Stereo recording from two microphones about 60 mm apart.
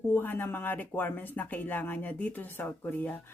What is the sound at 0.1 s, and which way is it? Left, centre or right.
Speech, left.